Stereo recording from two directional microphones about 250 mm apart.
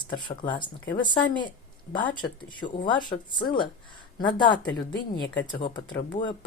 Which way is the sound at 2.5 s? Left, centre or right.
Centre.